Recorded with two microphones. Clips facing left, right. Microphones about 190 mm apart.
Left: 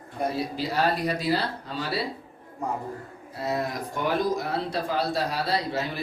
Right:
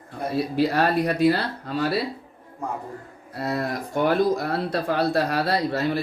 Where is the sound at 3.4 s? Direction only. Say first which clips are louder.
Right 2 dB; 60° right (ahead or behind).